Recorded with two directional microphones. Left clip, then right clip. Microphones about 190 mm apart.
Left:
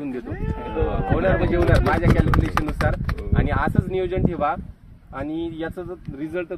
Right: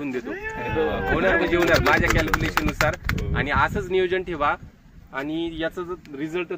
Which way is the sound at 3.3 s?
60° left (ahead or behind).